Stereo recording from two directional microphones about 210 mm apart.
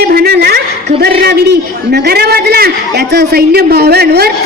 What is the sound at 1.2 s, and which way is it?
A man's voice, 50° right (ahead or behind).